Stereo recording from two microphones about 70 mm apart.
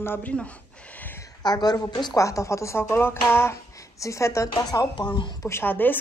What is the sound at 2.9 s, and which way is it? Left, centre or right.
Speech, left.